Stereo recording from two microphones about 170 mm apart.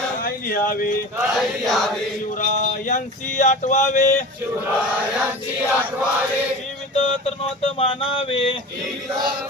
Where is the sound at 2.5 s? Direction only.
45° left (ahead or behind).